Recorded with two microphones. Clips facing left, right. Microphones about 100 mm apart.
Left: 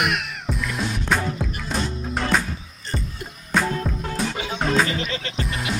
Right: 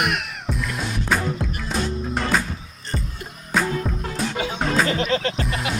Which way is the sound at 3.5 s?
Centre (ahead or behind).